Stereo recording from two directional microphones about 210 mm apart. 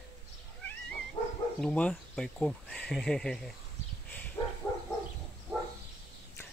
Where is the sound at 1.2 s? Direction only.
30° left (ahead or behind).